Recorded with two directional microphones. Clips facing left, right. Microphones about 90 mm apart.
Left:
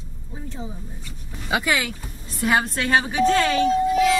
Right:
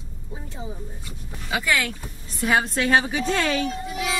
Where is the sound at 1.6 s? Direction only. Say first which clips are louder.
Right 2 dB; 15° left (ahead or behind).